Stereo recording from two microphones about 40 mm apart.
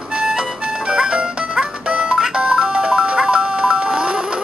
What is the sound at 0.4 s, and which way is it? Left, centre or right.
Music, right.